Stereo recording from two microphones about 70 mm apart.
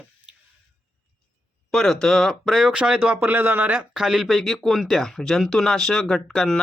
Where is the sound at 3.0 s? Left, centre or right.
Right.